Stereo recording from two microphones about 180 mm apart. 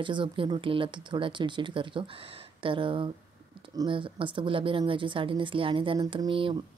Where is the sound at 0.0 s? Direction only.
25° right (ahead or behind).